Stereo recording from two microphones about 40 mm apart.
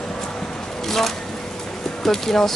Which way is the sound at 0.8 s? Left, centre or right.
Centre.